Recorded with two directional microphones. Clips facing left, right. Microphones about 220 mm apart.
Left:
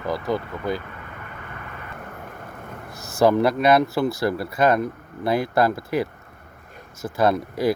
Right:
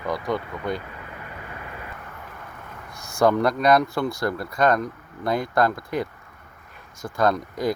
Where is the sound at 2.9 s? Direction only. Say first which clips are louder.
Left 2 dB; 5° left (ahead or behind).